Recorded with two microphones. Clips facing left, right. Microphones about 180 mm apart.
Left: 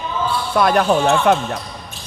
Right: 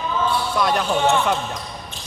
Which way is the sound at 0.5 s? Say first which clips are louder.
Left 9 dB; 60° left (ahead or behind).